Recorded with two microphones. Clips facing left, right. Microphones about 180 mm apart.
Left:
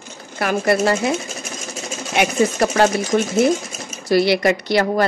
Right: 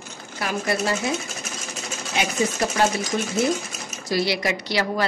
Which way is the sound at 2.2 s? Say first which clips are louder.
Left 6 dB; 60° left (ahead or behind).